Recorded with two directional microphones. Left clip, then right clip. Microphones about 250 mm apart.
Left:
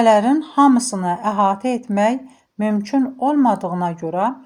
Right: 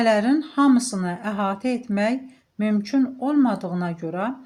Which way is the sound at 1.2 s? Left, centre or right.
Left.